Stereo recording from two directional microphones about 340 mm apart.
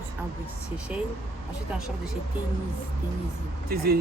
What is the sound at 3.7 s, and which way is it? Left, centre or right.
Speech, right.